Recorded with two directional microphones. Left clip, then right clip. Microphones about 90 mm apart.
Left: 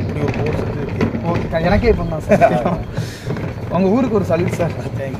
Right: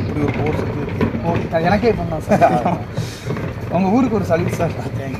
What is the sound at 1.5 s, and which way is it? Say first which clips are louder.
Speech: even; 10° left (ahead or behind).